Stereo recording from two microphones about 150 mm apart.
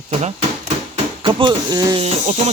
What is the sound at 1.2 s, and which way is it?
Speech, 30° right (ahead or behind).